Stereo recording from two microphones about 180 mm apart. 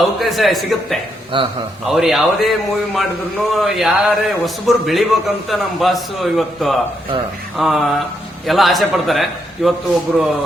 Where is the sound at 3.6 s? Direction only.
Centre (ahead or behind).